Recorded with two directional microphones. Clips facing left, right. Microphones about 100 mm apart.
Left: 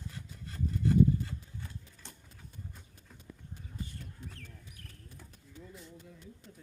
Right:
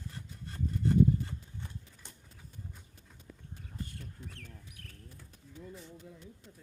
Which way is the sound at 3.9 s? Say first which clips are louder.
Even; 70° right (ahead or behind).